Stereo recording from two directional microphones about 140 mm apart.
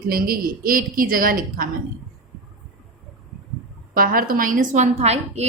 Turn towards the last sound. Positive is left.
turn(degrees=-50)  # may be behind; listen again after turning